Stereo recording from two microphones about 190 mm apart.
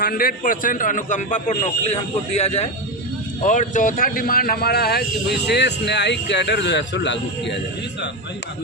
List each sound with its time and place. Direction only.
0.0 s a man's voice: 50° left (ahead or behind); by 7.5 s 70° left (ahead or behind)